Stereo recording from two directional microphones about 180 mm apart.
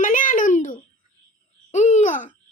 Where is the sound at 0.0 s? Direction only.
45° left (ahead or behind).